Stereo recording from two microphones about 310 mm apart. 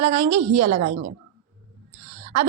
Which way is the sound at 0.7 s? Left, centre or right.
Right.